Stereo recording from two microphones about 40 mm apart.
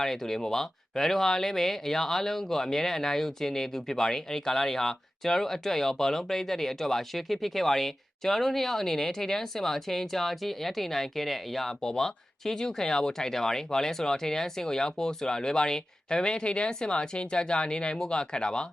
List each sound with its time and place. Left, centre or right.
0.0 s speech: centre
11.8 s speech: centre